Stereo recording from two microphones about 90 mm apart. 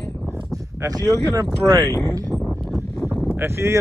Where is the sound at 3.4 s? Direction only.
30° right (ahead or behind).